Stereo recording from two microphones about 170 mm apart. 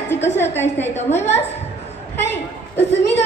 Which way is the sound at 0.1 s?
15° left (ahead or behind).